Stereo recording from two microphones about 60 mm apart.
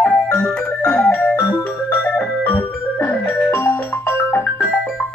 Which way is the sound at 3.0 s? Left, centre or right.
Left.